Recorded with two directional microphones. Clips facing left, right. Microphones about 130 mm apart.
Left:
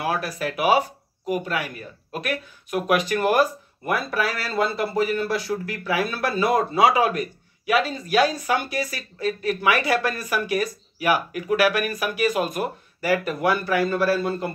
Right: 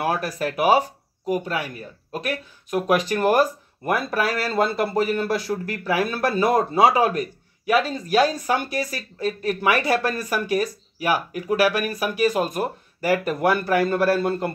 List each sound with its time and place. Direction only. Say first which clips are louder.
0.0 s speech: right 2 dB; 45° right (ahead or behind)